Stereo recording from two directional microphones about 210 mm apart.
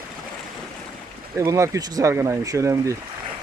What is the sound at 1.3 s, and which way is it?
Speech, 15° right (ahead or behind).